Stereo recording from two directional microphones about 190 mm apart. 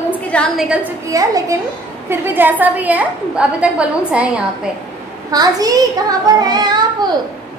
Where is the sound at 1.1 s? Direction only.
20° right (ahead or behind).